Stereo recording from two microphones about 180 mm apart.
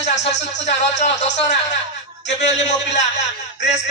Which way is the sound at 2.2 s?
80° left.